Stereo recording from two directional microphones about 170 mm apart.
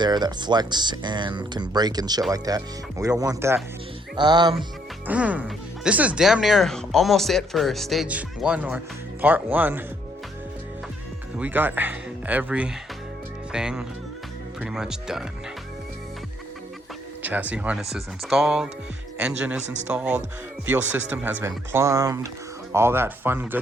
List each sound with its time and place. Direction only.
0.0 s speech: 25° right (ahead or behind)
5.0 s speech: 10° right (ahead or behind)
11.3 s speech: 10° right (ahead or behind)
17.2 s speech: 10° right (ahead or behind)